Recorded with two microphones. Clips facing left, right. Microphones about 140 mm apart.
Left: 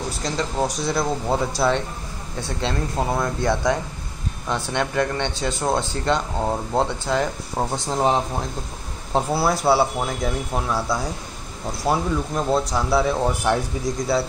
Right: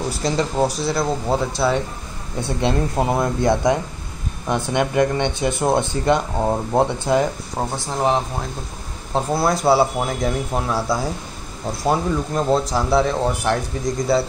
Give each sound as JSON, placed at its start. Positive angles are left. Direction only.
{"t": 0.2, "sound": "speech", "side_deg": -5}
{"t": 2.6, "sound": "speech", "side_deg": -20}
{"t": 7.7, "sound": "speech", "side_deg": 20}
{"t": 9.1, "sound": "speech", "side_deg": 5}